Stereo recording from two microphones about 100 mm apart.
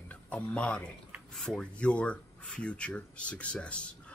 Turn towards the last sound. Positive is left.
turn(degrees=10)  # may be behind; listen again after turning